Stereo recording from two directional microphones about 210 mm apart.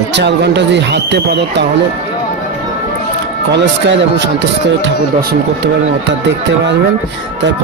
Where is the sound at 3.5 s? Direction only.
55° right (ahead or behind).